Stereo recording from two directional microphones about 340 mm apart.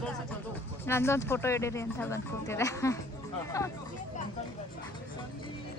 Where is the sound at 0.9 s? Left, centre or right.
Centre.